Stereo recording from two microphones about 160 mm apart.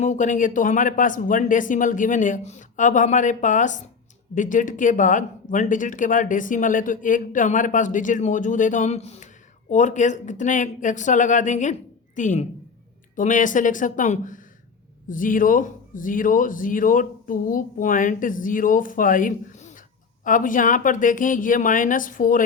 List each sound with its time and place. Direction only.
0.0 s speech: 50° left (ahead or behind)